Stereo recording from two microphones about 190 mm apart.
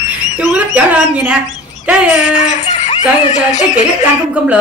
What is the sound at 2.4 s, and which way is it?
Speech, 40° left (ahead or behind).